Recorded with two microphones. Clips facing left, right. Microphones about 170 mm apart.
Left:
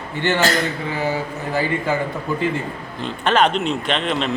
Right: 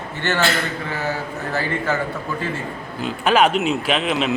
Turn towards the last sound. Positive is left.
turn(degrees=-5)  # may be behind; listen again after turning